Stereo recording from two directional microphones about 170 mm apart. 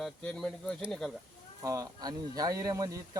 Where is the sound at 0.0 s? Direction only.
Centre (ahead or behind).